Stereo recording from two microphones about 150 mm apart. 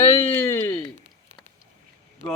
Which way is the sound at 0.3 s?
15° left (ahead or behind).